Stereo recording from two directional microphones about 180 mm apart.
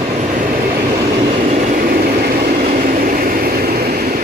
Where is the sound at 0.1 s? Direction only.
40° right (ahead or behind).